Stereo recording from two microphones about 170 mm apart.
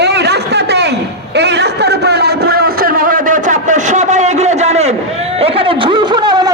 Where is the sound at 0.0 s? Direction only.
80° right.